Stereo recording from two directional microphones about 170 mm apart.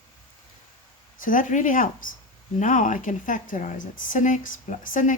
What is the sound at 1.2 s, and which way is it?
A woman's voice, 50° left (ahead or behind).